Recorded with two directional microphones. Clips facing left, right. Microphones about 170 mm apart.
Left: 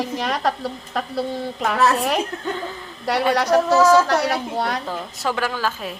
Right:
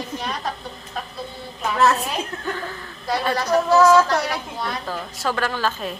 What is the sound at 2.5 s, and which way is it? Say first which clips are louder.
Speech: left 2 dB; 20° left (ahead or behind).